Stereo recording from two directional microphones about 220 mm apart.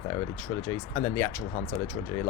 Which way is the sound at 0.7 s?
15° left (ahead or behind).